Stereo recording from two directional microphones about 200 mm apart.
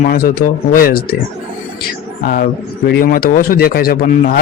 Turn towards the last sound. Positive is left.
turn(degrees=50)  # may be behind; listen again after turning